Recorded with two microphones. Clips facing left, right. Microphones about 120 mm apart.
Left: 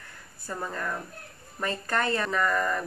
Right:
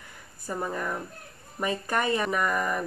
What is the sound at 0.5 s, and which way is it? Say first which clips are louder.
Speech: right 2 dB; 15° right (ahead or behind).